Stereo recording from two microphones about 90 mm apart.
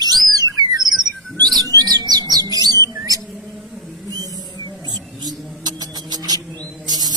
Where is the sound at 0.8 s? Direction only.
Centre (ahead or behind).